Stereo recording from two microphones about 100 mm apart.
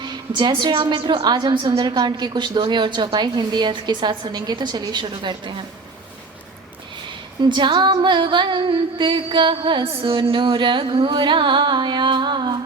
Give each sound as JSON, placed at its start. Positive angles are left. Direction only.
{"t": 0.0, "sound": "a woman's voice", "side_deg": -50}
{"t": 7.4, "sound": "a woman's voice", "side_deg": -50}
{"t": 9.8, "sound": "carnatic music", "side_deg": -75}